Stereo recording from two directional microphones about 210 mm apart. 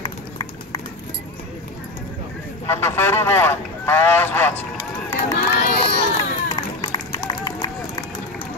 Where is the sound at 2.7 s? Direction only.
10° left (ahead or behind).